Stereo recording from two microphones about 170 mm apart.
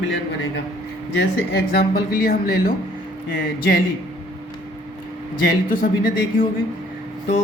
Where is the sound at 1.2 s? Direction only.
70° left (ahead or behind).